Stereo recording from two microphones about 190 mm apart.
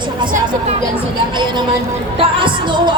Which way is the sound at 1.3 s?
25° right (ahead or behind).